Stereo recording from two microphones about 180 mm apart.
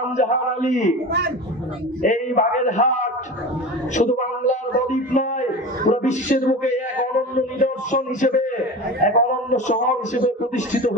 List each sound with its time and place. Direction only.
0.2 s a man's voice: 40° left (ahead or behind)
2.0 s a man's voice: 45° left (ahead or behind)